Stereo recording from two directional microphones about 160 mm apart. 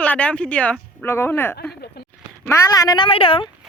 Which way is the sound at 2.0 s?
80° left.